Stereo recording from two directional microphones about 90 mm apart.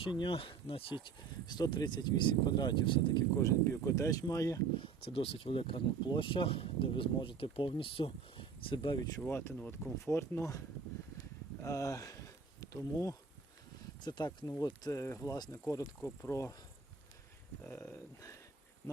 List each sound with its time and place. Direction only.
0.0 s speech: 65° left (ahead or behind)
3.3 s speech: 30° left (ahead or behind)
4.8 s speech: 90° left; by 9.0 s 65° left (ahead or behind)
9.2 s speech: 25° left (ahead or behind)
11.6 s speech: 35° left (ahead or behind)
14.0 s speech: 50° left (ahead or behind)
16.0 s speech: 25° left (ahead or behind)
17.6 s speech: 20° left (ahead or behind)